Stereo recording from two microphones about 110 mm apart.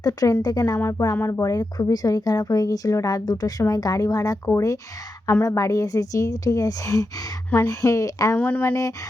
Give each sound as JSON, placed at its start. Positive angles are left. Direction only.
{"t": 0.0, "sound": "speech", "side_deg": 35}
{"t": 0.8, "sound": "speech", "side_deg": 25}
{"t": 1.4, "sound": "speech", "side_deg": 35}
{"t": 8.4, "sound": "speech", "side_deg": 15}